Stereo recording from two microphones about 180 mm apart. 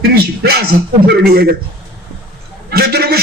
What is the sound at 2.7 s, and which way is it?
Speech, 60° right (ahead or behind).